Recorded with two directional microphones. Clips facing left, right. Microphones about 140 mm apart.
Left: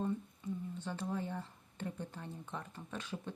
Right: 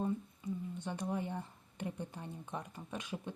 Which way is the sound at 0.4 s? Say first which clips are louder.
Right 1 dB; 10° right (ahead or behind).